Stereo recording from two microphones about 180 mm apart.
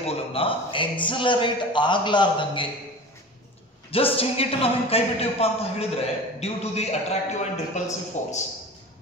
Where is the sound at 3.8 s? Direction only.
30° left (ahead or behind).